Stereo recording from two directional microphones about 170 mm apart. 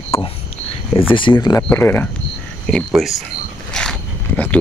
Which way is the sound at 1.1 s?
30° left (ahead or behind).